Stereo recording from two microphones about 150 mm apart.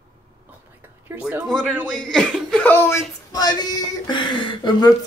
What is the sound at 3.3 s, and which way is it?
Speech, 25° left (ahead or behind).